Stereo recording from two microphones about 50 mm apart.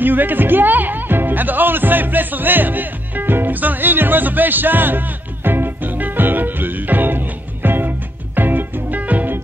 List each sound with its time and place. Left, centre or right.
0.0 s speech: right
8.4 s music: right